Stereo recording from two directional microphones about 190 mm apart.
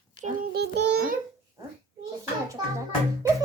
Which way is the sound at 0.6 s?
60° right (ahead or behind).